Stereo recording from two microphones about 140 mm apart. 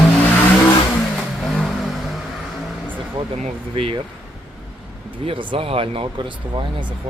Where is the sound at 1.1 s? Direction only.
5° left (ahead or behind).